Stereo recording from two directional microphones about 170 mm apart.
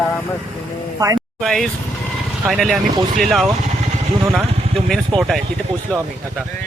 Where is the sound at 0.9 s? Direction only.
20° right (ahead or behind).